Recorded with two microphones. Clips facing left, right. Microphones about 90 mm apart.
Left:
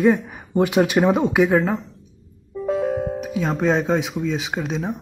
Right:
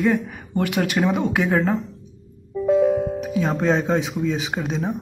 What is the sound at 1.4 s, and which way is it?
Speech, centre (ahead or behind).